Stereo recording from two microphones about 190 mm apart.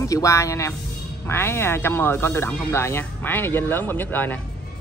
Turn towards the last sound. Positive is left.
turn(degrees=10)  # may be behind; listen again after turning